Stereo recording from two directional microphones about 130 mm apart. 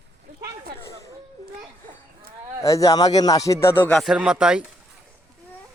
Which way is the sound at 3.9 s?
Centre (ahead or behind).